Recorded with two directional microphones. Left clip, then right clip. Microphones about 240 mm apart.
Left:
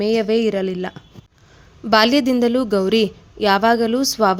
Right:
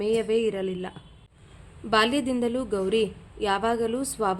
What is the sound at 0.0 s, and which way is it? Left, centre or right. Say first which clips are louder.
A woman's voice: left 6 dB; left.